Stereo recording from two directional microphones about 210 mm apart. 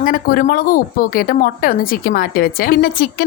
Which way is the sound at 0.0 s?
40° left (ahead or behind).